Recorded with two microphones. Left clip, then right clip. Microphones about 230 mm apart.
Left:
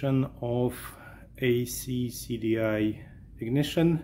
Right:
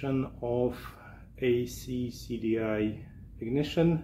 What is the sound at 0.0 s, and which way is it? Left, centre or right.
Speech, left.